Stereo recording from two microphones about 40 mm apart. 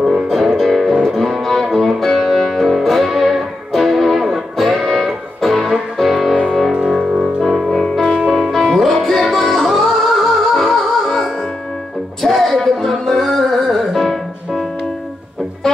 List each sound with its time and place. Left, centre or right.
0.6 s music: centre
6.7 s music: right
7.4 s music: centre
8.0 s music: centre
8.3 s music: centre